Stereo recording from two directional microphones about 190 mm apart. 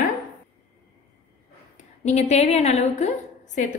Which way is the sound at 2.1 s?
35° left (ahead or behind).